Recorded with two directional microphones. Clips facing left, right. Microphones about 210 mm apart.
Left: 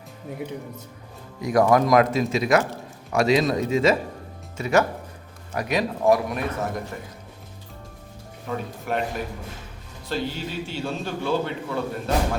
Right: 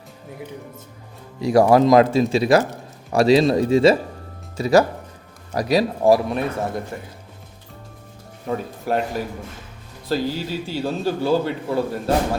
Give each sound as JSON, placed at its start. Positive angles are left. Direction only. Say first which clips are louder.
{"t": 1.4, "sound": "a man's voice", "louder": "right 4 dB", "side_deg": -30}
{"t": 8.9, "sound": "a man's voice", "louder": "right 5 dB", "side_deg": -35}
{"t": 10.1, "sound": "a man's voice", "louder": "right 5 dB", "side_deg": -35}